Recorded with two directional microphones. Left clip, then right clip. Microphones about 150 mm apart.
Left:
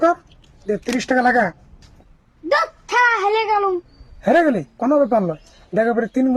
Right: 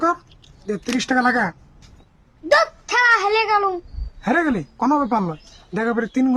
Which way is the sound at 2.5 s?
20° right (ahead or behind).